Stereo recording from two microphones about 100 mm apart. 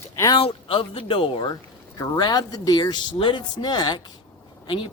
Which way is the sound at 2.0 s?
45° left (ahead or behind).